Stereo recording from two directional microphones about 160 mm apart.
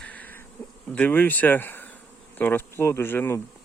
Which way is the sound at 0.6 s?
10° left (ahead or behind).